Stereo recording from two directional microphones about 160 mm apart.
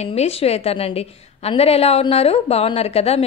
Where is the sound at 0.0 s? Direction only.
40° left (ahead or behind).